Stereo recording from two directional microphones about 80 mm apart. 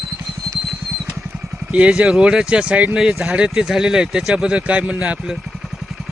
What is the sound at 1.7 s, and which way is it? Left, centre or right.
Speech, centre.